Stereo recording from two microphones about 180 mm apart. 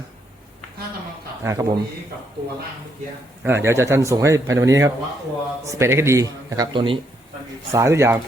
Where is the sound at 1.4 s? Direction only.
20° right (ahead or behind).